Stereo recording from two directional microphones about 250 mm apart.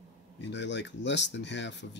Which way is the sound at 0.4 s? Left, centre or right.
Left.